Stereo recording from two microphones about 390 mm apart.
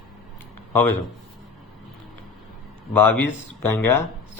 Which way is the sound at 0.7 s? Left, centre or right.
Centre.